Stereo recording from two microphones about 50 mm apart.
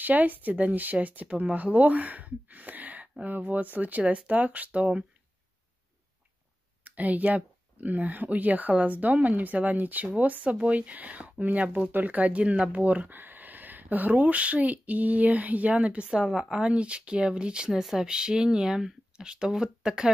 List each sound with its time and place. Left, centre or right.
0.0 s speech: right
6.8 s speech: right
16.1 s speech: centre